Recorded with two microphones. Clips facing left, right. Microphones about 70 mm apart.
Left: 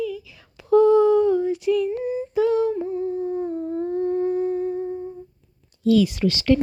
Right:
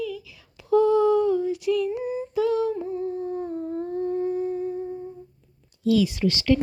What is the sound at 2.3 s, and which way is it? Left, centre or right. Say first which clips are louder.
Humming: left 3 dB; left.